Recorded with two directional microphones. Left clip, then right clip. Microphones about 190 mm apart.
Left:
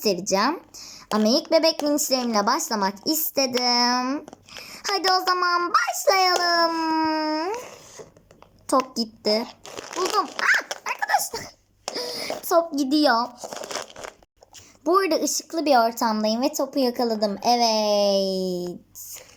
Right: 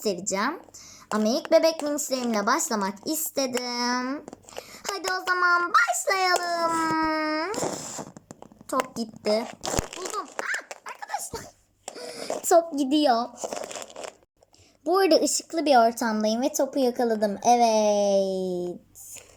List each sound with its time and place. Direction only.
0.0 s a woman's voice: 10° left (ahead or behind)
7.6 s speech: 55° right (ahead or behind)
9.6 s speech: 60° right (ahead or behind)
10.4 s dog: 5° left (ahead or behind)
10.8 s a sound: centre (ahead or behind)
12.5 s a woman's voice: 10° left (ahead or behind)
13.4 s a woman's voice: 10° right (ahead or behind); by 18.8 s 5° left (ahead or behind)